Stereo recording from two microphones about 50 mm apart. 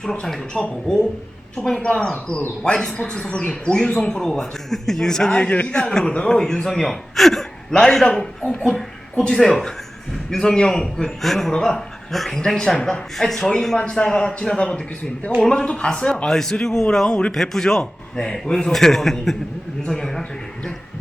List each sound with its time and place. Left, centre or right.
0.0 s a man's voice: centre
1.6 s a man's voice: centre
2.6 s speech: centre
3.9 s a man's voice: centre
5.4 s a man's voice: left
12.1 s a man's voice: centre
13.7 s a man's voice: left